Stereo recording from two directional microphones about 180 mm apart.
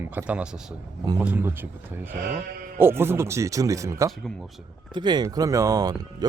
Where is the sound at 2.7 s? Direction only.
10° right (ahead or behind).